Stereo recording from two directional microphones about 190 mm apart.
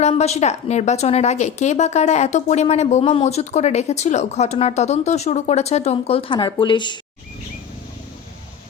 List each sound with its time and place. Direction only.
0.0 s a woman's voice: 35° left (ahead or behind)